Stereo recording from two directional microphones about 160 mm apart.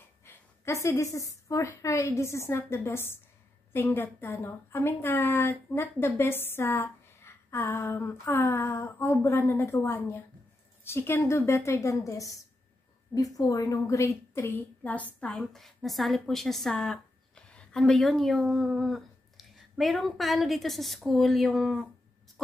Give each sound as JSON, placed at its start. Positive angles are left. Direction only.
{"t": 0.2, "sound": "a woman's voice", "side_deg": 15}